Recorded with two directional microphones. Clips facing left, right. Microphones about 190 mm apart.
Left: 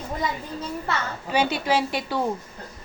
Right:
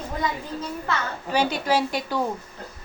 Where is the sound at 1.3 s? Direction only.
40° right (ahead or behind).